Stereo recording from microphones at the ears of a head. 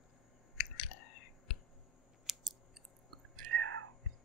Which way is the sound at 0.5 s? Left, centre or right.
Left.